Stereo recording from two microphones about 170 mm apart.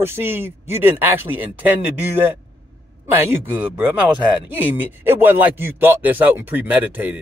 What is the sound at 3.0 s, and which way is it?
Speech, 15° right (ahead or behind).